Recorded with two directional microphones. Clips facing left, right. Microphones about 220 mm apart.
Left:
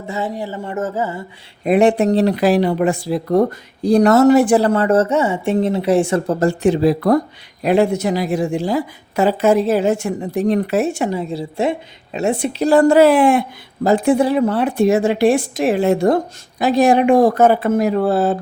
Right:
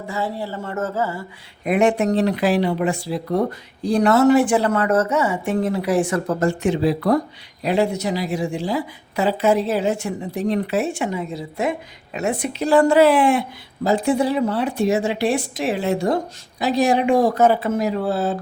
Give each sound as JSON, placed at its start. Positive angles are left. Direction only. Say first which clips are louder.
{"t": 0.1, "sound": "speech", "louder": "left 3 dB", "side_deg": 20}
{"t": 1.6, "sound": "a woman's voice", "louder": "left 4 dB", "side_deg": 30}
{"t": 12.6, "sound": "speech", "louder": "left 3 dB", "side_deg": 40}